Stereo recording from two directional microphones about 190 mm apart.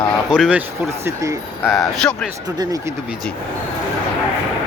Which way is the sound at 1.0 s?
15° right (ahead or behind).